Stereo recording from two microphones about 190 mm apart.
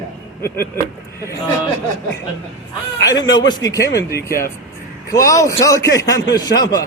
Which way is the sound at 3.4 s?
20° left (ahead or behind).